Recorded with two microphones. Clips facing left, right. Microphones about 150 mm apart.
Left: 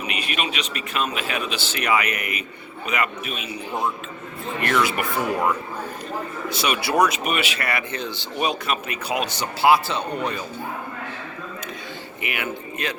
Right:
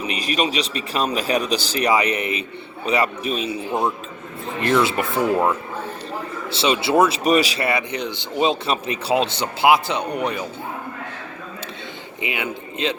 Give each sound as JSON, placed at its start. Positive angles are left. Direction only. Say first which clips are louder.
{"t": 0.0, "sound": "a man's voice", "louder": "right 5 dB", "side_deg": -35}
{"t": 7.7, "sound": "speech", "louder": "right 4 dB", "side_deg": -20}
{"t": 12.2, "sound": "speech", "louder": "right 2 dB", "side_deg": -20}